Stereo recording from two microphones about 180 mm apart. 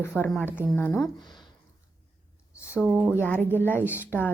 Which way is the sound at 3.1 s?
10° left (ahead or behind).